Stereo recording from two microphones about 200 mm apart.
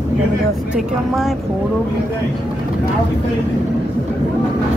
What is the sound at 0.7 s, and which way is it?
Speech, centre (ahead or behind).